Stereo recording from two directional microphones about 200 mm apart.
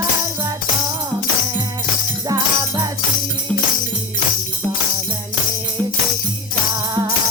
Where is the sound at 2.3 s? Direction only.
20° right (ahead or behind).